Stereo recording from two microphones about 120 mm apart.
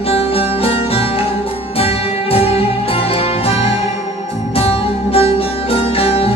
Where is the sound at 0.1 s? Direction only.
55° left (ahead or behind).